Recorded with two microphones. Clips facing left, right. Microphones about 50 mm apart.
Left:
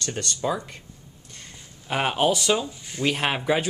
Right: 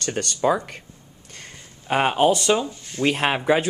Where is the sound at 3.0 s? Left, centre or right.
Centre.